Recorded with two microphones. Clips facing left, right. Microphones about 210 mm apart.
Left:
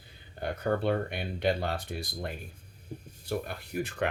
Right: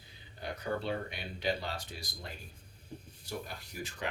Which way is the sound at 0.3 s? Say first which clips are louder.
Left 7 dB; 55° left (ahead or behind).